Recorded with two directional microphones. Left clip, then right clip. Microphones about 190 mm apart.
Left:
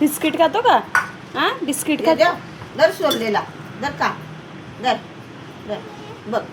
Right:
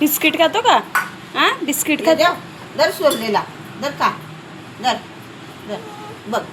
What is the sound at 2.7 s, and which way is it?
Speech, 55° right (ahead or behind).